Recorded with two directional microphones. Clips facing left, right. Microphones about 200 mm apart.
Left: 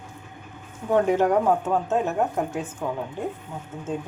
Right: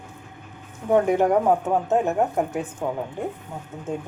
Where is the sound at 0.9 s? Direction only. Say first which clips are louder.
Right 1 dB; 10° right (ahead or behind).